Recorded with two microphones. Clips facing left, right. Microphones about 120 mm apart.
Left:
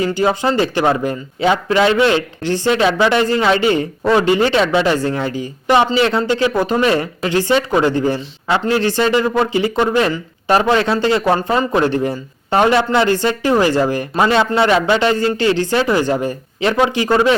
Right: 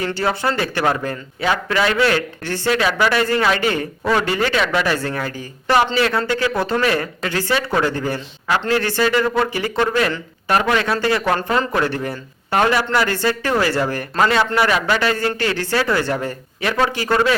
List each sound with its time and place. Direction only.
0.0 s speech: 15° left (ahead or behind)